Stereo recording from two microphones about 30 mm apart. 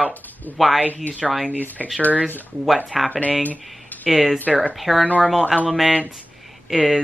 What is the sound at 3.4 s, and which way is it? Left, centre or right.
Speech, left.